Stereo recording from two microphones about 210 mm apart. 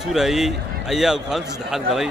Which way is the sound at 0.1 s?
Centre (ahead or behind).